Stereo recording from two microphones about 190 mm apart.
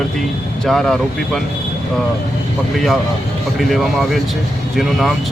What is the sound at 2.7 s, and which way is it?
Speech, centre (ahead or behind).